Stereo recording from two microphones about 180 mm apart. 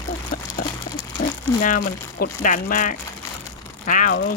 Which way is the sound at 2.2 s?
50° left (ahead or behind).